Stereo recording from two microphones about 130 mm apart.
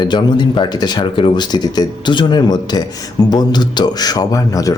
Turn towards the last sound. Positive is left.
turn(degrees=25)  # may be behind; listen again after turning